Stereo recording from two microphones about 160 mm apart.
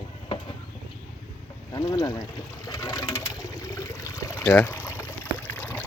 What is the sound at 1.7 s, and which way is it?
Speech, 25° left (ahead or behind).